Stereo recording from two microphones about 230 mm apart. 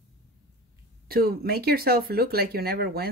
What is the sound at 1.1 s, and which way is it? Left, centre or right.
Speech, right.